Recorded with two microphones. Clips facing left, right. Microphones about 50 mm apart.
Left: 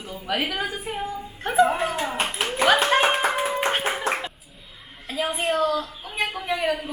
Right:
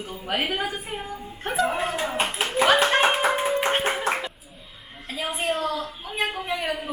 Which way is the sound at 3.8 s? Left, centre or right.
Centre.